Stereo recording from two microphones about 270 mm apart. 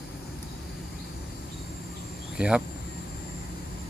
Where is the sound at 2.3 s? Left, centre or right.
Centre.